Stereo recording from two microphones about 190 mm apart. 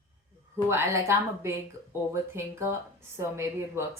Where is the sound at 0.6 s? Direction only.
15° right (ahead or behind).